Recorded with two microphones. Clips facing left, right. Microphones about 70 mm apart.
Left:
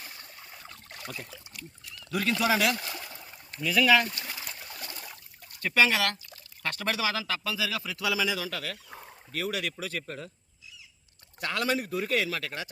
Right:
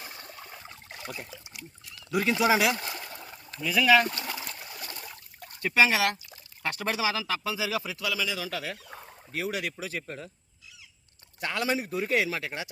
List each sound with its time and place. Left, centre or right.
0.9 s boat: centre
1.3 s a man's voice: centre
2.7 s a sound: centre
3.6 s a man's voice: centre
4.9 s a sound: centre
5.5 s speech: centre
7.9 s a man's voice: centre
11.3 s a man's voice: centre